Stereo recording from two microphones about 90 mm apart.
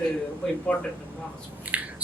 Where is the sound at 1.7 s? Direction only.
15° right (ahead or behind).